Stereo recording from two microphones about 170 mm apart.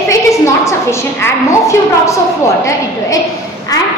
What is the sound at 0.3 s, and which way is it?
A woman's voice, 15° left (ahead or behind).